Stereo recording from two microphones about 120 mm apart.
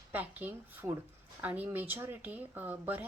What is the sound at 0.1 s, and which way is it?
Speech, 15° right (ahead or behind).